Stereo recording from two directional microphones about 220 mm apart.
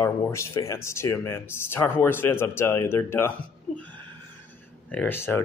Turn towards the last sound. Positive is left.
turn(degrees=10)  # may be behind; listen again after turning